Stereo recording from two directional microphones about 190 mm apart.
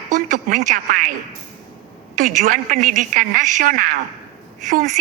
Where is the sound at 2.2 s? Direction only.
45° right (ahead or behind).